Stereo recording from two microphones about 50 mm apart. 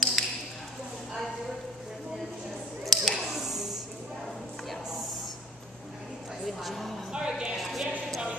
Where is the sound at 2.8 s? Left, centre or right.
Centre.